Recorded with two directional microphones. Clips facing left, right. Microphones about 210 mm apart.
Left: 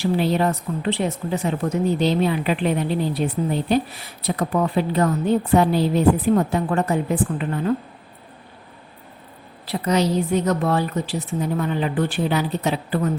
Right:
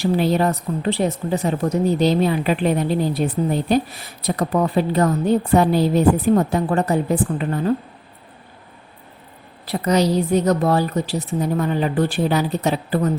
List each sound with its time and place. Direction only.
0.0 s a woman's voice: 40° right (ahead or behind)
9.8 s a woman's voice: 40° right (ahead or behind)